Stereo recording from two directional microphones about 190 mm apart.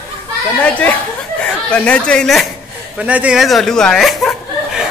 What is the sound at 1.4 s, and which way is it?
Speech, 5° left (ahead or behind).